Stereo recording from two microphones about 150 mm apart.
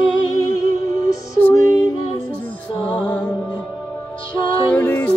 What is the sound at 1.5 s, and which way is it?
Music, 25° left (ahead or behind).